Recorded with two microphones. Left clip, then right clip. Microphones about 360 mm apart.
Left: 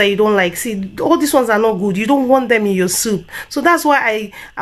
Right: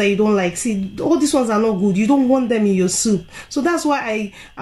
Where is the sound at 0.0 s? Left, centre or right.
Left.